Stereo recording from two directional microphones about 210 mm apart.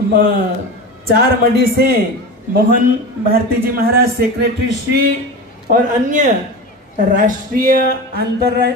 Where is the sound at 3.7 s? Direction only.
45° right (ahead or behind).